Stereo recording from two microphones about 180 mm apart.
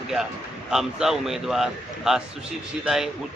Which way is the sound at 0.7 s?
5° right (ahead or behind).